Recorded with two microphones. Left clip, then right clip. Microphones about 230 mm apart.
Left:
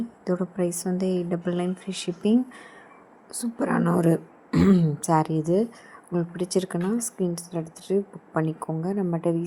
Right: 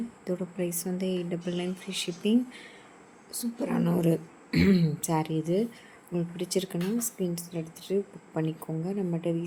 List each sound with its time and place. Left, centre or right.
0.3 s a woman's voice: centre